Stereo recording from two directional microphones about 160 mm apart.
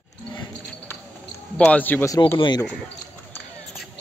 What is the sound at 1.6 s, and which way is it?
Speech, 10° left (ahead or behind).